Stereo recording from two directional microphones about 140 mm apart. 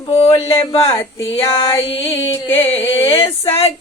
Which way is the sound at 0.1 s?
45° left (ahead or behind).